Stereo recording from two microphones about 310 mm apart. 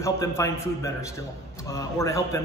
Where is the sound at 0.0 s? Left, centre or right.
Centre.